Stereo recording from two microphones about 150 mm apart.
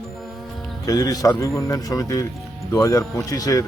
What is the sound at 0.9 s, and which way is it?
Speech, 25° left (ahead or behind).